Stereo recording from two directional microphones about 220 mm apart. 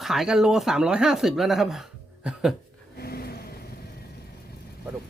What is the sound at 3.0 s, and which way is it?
Vehicle, 45° left (ahead or behind).